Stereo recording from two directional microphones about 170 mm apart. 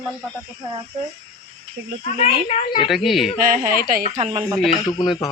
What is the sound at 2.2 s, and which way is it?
Speech, 40° left (ahead or behind).